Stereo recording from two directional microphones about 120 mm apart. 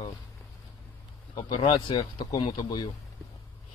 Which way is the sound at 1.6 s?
45° left (ahead or behind).